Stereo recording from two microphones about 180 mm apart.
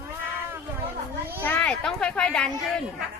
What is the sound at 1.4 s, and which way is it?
Speech, 10° left (ahead or behind).